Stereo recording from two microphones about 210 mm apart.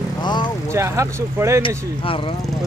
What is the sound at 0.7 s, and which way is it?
Speech, 15° right (ahead or behind).